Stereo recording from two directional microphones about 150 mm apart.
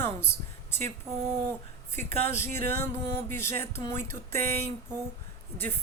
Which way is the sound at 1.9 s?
15° left (ahead or behind).